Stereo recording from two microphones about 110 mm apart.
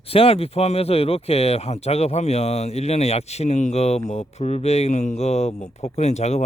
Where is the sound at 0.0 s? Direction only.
60° left (ahead or behind).